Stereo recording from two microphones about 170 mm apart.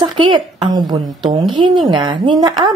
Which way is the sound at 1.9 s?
25° right (ahead or behind).